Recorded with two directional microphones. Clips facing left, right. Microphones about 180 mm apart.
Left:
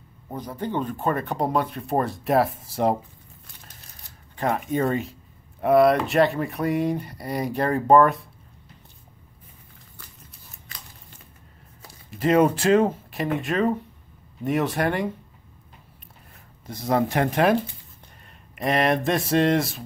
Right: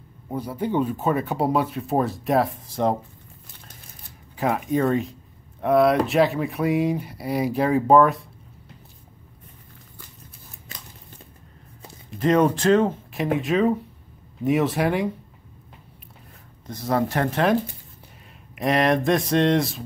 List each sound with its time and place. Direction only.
0.3 s speech: 10° right (ahead or behind); by 3.0 s 5° left (ahead or behind)
4.4 s speech: centre (ahead or behind)
12.1 s speech: 5° left (ahead or behind)
16.6 s speech: 15° left (ahead or behind)
18.2 s speech: centre (ahead or behind)